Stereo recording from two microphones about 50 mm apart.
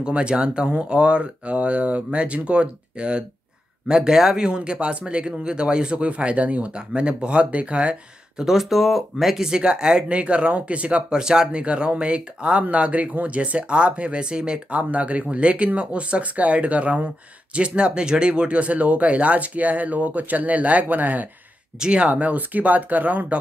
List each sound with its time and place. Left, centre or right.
0.0 s speech: right
8.5 s speech: centre
9.5 s speech: centre; by 21.3 s right
21.7 s speech: centre
22.1 s speech: right